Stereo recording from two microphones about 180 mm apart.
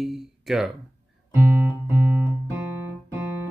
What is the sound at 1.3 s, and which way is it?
Music, 15° right (ahead or behind).